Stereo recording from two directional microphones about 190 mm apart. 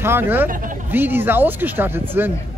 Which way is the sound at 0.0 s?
10° right (ahead or behind).